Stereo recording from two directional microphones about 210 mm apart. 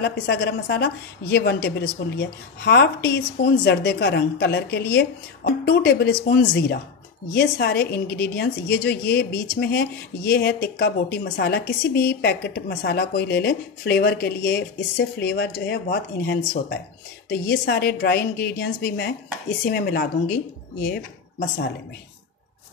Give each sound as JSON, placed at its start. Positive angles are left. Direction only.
{"t": 0.0, "sound": "a woman's voice", "side_deg": 55}